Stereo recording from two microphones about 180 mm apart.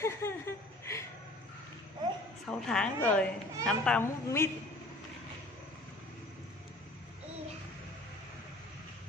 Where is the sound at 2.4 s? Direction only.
5° left (ahead or behind).